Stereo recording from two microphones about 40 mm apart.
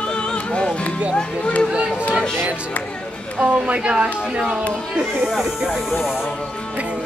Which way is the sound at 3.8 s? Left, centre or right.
Right.